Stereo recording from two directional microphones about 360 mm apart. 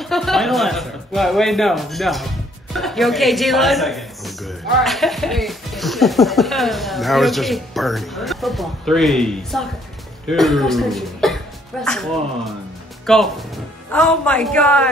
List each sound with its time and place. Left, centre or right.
0.0 s music: centre
2.7 s a woman's voice: centre